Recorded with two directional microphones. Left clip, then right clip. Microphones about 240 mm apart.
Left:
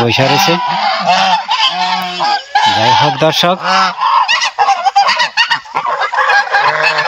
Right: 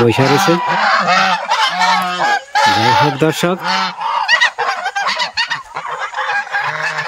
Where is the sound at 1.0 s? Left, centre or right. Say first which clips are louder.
Left 2 dB; centre.